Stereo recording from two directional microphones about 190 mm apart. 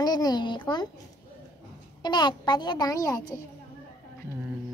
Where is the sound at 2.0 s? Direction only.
25° left (ahead or behind).